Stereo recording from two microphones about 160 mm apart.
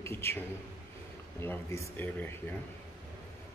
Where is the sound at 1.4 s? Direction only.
15° left (ahead or behind).